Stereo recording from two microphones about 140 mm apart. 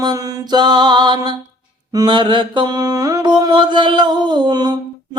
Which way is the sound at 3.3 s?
30° right (ahead or behind).